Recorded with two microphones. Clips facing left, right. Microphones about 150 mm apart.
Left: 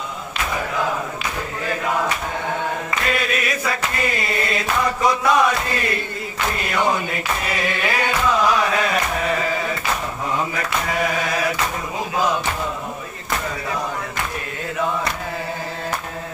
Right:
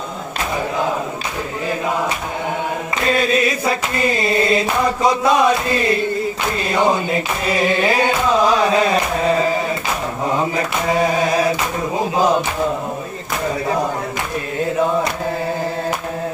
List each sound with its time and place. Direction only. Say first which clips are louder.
3.1 s a sound: right 7 dB; 30° right (ahead or behind)
6.6 s singing: right 5 dB; 25° right (ahead or behind)
10.5 s singing: right 5 dB; 30° right (ahead or behind)